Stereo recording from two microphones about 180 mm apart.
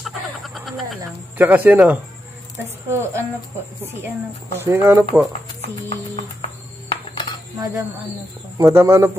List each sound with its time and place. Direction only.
0.0 s frog: centre (ahead or behind)
1.4 s speech: 10° right (ahead or behind)
4.6 s speech: 15° right (ahead or behind)
6.1 s a sound: 30° left (ahead or behind)
7.5 s speech: 20° right (ahead or behind)